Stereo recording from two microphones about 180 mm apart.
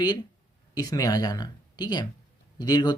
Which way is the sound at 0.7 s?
20° left (ahead or behind).